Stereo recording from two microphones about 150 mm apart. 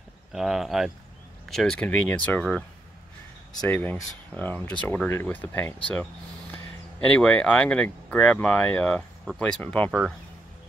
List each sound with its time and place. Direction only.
0.3 s speech: centre (ahead or behind)
3.6 s speech: 10° left (ahead or behind)
7.1 s speech: 5° left (ahead or behind)